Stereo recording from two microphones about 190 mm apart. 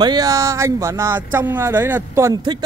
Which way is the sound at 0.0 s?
20° right (ahead or behind).